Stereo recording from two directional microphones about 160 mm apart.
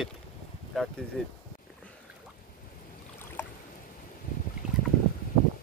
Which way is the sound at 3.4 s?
15° left (ahead or behind).